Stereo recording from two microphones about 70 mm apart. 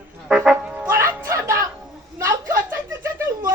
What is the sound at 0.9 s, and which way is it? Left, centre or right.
Music, right.